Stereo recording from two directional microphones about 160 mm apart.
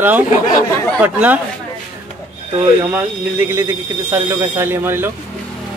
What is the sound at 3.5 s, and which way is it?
Speech, 15° right (ahead or behind).